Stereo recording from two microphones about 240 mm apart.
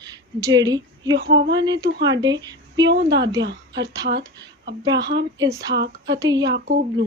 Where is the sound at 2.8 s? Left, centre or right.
Right.